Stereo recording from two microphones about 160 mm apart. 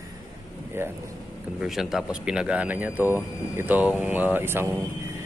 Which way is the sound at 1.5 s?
5° right (ahead or behind).